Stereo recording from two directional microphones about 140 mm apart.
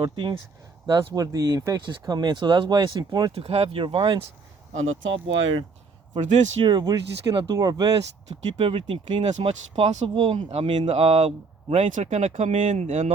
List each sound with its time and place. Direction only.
0.0 s speech: 30° right (ahead or behind)
3.3 s speech: 45° right (ahead or behind)
6.1 s speech: 60° right (ahead or behind)
6.6 s speech: 30° right (ahead or behind)
8.5 s speech: 40° right (ahead or behind)